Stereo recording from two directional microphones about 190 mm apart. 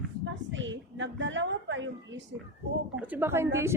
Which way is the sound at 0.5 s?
75° right (ahead or behind).